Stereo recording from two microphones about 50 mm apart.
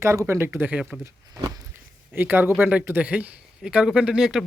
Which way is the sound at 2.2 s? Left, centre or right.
Right.